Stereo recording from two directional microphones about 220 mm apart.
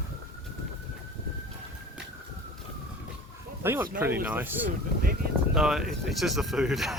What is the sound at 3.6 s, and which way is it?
Speech, 10° right (ahead or behind).